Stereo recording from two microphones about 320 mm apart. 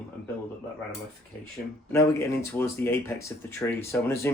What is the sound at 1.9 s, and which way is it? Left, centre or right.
Speech, centre.